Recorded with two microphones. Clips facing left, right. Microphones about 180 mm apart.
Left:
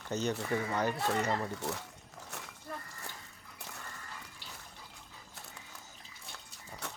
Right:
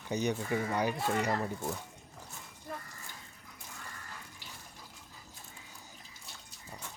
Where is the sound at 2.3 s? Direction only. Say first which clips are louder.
Left 7 dB; 75° left (ahead or behind).